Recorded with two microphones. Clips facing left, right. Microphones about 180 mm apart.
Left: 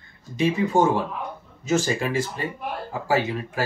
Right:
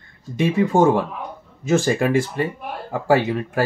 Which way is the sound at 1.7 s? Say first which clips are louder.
Right 5 dB; 55° right (ahead or behind).